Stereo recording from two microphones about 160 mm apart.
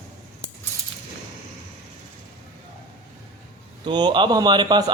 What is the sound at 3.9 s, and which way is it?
Speech, 30° right (ahead or behind).